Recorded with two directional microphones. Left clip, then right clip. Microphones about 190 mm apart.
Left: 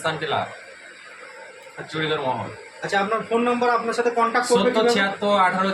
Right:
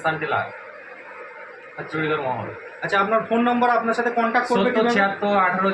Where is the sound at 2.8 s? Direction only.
Centre (ahead or behind).